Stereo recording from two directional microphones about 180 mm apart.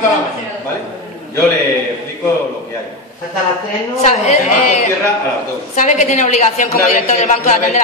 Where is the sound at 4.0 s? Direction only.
35° left (ahead or behind).